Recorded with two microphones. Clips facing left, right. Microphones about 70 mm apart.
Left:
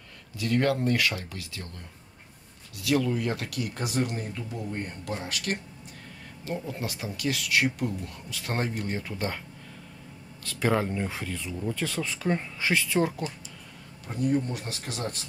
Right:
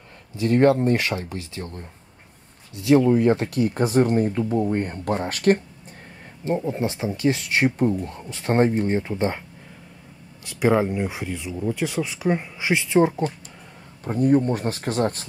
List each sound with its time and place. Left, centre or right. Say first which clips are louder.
0.4 s speech: right 8 dB; right
10.4 s speech: right 6 dB; centre
14.0 s speech: right 8 dB; right